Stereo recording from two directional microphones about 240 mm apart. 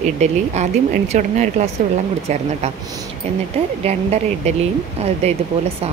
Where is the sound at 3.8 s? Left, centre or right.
Right.